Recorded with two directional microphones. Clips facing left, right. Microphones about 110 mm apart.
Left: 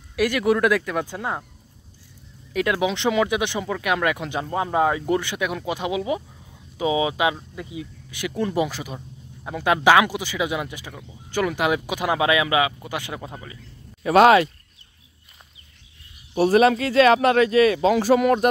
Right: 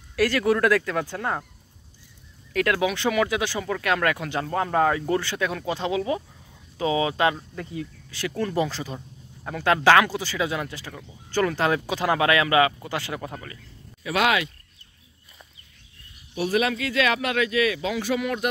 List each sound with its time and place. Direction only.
0.1 s speech: 15° left (ahead or behind)
2.5 s speech: 20° left (ahead or behind)
14.0 s speech: 40° left (ahead or behind)
16.3 s speech: 40° left (ahead or behind)